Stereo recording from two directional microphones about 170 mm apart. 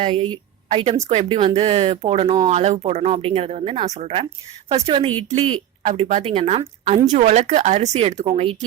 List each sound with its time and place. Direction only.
0.0 s a woman's voice: 30° right (ahead or behind)